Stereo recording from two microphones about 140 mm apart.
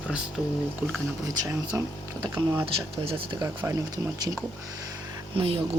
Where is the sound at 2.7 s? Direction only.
40° right (ahead or behind).